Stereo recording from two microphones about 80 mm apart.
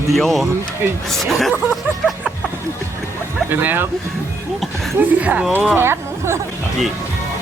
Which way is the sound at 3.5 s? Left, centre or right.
Right.